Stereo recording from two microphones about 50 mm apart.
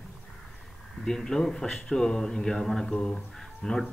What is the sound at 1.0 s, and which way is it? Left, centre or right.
Speech, centre.